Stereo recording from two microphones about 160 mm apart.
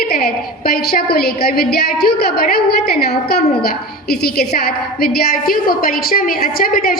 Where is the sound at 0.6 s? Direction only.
70° left (ahead or behind).